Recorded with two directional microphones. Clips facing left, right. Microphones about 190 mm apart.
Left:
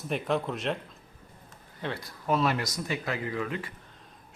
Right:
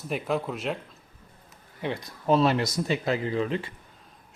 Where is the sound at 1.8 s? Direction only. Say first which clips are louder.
Right 4 dB; 15° right (ahead or behind).